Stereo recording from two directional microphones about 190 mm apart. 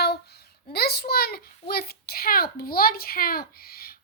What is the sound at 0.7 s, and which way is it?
A child's voice, 55° left (ahead or behind).